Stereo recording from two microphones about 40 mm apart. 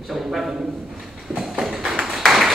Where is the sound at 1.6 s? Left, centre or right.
Centre.